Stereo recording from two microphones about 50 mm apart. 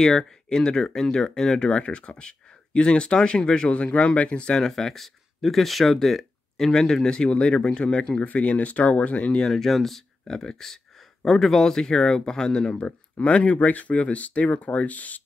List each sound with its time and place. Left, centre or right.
0.0 s speech: centre
9.4 s speech: centre; by 15.2 s left